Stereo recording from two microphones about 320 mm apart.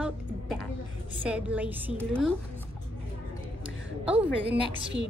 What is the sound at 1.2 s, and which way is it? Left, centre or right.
A woman's voice, centre.